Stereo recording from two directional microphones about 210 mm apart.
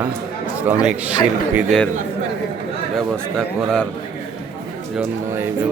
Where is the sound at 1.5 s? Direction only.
Centre (ahead or behind).